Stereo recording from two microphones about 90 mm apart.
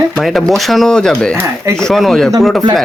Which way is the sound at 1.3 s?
30° right (ahead or behind).